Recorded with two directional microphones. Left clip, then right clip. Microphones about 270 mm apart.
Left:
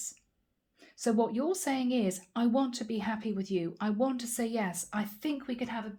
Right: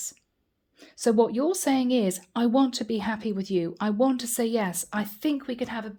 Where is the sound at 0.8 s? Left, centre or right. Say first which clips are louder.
Right 8 dB; right.